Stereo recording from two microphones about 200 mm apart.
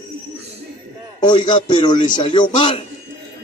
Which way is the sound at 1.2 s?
20° left (ahead or behind).